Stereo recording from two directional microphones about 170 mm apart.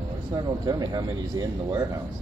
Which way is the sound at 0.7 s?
20° right (ahead or behind).